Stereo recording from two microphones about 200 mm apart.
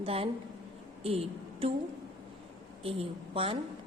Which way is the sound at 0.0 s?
30° right (ahead or behind).